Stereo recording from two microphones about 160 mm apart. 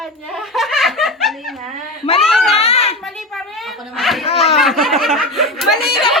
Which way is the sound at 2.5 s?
40° left (ahead or behind).